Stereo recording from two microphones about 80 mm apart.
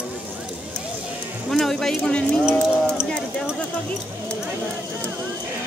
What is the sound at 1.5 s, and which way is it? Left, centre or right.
Clip-clop, centre.